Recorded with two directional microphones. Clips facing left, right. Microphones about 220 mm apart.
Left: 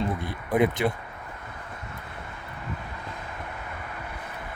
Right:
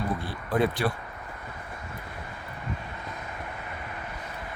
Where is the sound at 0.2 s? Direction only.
20° left (ahead or behind).